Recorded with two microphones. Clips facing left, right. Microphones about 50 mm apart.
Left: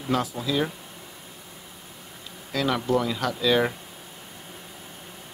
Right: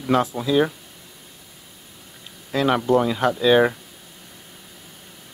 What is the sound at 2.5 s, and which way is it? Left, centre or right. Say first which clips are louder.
Speech: right 5 dB; right.